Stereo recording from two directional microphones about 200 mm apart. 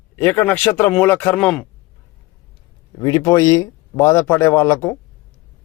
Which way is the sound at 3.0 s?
15° left (ahead or behind).